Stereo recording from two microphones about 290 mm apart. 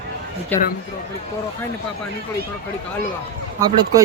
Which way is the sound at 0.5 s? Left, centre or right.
Centre.